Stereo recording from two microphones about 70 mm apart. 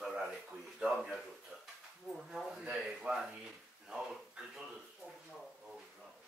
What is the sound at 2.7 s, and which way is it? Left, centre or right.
Speech, centre.